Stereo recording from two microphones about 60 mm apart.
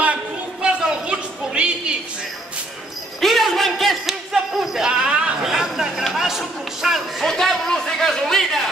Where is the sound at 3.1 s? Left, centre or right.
Centre.